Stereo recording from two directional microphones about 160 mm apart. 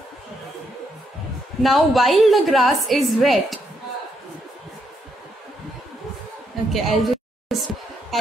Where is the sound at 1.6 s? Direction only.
Centre (ahead or behind).